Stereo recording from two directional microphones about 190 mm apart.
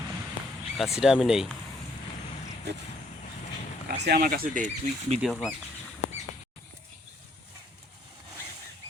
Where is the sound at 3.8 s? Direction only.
55° right (ahead or behind).